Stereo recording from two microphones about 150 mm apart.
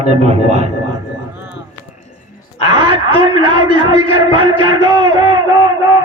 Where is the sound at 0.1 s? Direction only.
45° right (ahead or behind).